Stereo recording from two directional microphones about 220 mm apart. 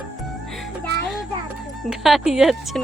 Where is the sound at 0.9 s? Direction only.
50° right (ahead or behind).